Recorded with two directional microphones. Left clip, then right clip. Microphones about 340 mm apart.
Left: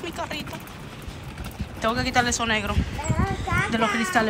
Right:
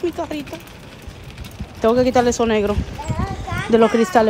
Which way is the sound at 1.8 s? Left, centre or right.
Centre.